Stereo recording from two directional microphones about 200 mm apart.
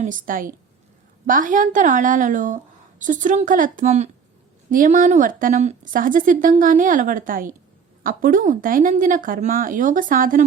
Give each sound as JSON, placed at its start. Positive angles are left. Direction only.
{"t": 0.0, "sound": "a woman's voice", "side_deg": -40}